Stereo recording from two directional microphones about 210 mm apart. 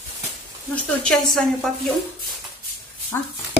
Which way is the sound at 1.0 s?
Centre (ahead or behind).